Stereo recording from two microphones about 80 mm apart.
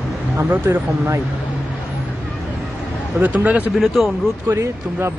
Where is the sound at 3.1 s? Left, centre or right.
Right.